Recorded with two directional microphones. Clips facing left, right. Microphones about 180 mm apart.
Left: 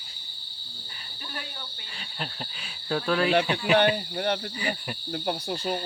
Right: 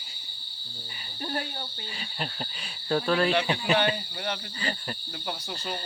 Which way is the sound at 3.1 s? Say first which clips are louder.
Left 1 dB; centre (ahead or behind).